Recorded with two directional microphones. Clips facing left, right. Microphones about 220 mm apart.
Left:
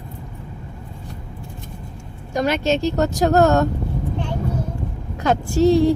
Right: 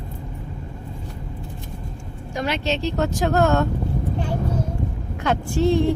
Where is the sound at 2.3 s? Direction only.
45° left (ahead or behind).